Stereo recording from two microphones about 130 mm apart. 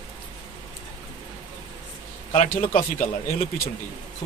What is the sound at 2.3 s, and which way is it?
Speech, 50° left (ahead or behind).